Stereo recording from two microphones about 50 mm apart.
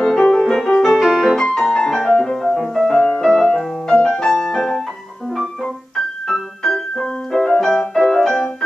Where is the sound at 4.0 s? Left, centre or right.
Centre.